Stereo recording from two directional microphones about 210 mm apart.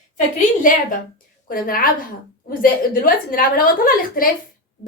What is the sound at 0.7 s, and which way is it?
A woman's voice, 40° left (ahead or behind).